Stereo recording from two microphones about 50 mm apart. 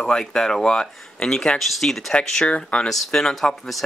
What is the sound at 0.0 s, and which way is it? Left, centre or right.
Speech, centre.